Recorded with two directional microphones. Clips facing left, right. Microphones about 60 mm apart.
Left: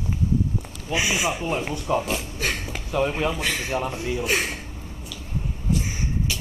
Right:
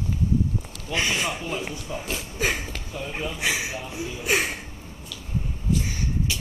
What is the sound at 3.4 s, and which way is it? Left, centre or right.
Speech, centre.